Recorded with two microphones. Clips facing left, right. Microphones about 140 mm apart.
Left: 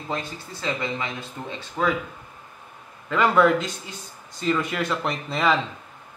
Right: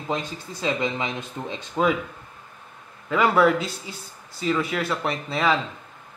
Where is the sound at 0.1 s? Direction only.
15° right (ahead or behind).